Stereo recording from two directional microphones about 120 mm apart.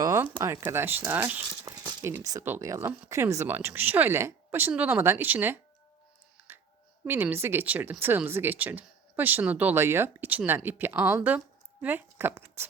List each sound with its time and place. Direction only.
0.4 s speech: 25° right (ahead or behind)
1.7 s a sound: 25° right (ahead or behind)
2.0 s speech: 20° right (ahead or behind)
7.0 s speech: 20° right (ahead or behind)